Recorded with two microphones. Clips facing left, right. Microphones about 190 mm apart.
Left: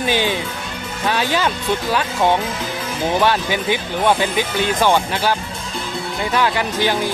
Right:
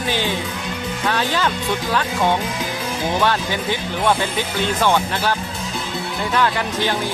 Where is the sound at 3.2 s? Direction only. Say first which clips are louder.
Left 2 dB; 15° left (ahead or behind).